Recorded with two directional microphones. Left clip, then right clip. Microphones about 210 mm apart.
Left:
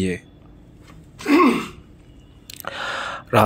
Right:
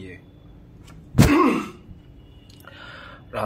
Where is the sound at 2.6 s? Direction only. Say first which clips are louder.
Left 14 dB; 40° left (ahead or behind).